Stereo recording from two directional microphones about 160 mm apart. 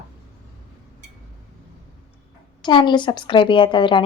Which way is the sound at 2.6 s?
30° left (ahead or behind).